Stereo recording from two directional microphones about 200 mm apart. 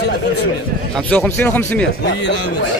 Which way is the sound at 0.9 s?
5° left (ahead or behind).